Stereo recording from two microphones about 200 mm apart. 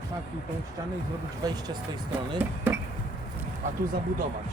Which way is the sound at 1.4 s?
20° right (ahead or behind).